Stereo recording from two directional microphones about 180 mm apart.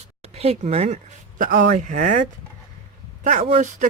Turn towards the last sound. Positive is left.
turn(degrees=-45)  # may be behind; listen again after turning